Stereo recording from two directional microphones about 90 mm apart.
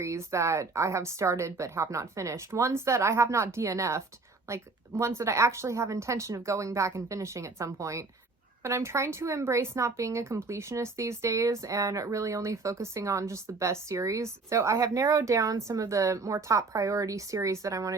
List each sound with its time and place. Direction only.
0.0 s speech: 35° right (ahead or behind)